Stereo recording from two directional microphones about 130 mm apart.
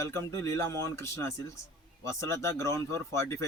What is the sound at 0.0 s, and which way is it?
Speech, 20° left (ahead or behind).